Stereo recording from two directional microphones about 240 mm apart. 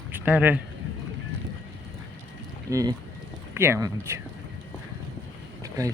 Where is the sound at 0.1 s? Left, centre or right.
Centre.